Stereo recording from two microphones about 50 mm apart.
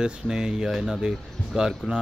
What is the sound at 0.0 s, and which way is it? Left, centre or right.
A man's voice, centre.